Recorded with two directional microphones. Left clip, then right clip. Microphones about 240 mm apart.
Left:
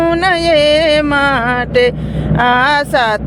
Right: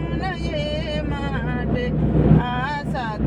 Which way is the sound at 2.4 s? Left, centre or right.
Left.